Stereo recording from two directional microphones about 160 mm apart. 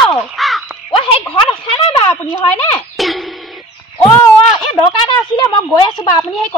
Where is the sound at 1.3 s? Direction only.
35° left (ahead or behind).